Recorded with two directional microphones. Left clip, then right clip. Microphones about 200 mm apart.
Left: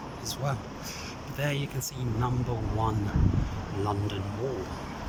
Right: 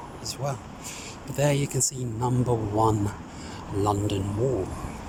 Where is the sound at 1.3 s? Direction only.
25° right (ahead or behind).